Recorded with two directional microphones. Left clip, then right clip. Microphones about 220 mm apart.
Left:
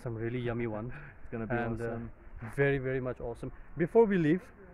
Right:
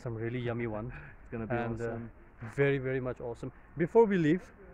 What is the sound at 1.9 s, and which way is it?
Speech, 20° left (ahead or behind).